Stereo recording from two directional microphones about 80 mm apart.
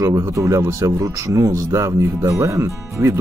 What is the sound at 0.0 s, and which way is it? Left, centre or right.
Speech, right.